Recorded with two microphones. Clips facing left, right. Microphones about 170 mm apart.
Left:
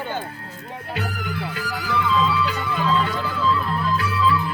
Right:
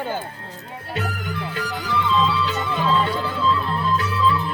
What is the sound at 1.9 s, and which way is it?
Music, 30° right (ahead or behind).